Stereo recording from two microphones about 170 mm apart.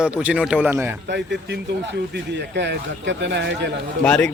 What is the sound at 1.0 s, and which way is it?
A man's voice, 90° right.